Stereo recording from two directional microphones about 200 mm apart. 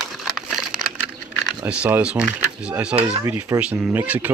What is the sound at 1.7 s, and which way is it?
Speech, 5° right (ahead or behind).